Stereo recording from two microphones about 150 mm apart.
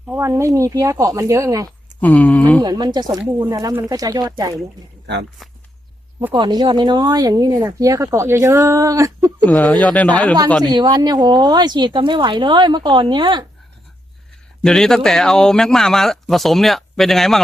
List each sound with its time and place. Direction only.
0.2 s speech: 20° right (ahead or behind)
2.0 s a sound: 10° left (ahead or behind)
2.6 s speech: 25° right (ahead or behind)
5.4 s speech: centre (ahead or behind)
6.3 s speech: 30° right (ahead or behind)
9.5 s a sound: 10° left (ahead or behind)
10.6 s speech: 30° right (ahead or behind)
14.6 s speech: 5° left (ahead or behind)